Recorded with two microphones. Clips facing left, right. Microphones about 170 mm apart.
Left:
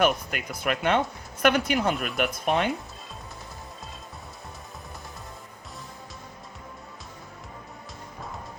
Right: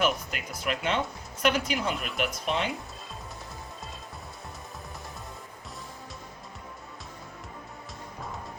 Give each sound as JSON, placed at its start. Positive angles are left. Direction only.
{"t": 0.0, "sound": "speech", "side_deg": 55}